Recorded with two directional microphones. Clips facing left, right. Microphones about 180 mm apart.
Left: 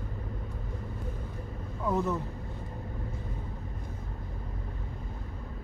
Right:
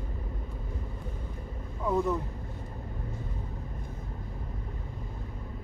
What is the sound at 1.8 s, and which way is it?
Speech, centre (ahead or behind).